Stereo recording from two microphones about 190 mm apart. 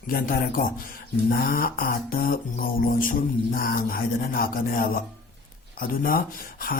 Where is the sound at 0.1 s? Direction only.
50° left (ahead or behind).